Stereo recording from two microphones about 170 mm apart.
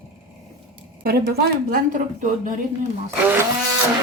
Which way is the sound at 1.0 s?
70° right (ahead or behind).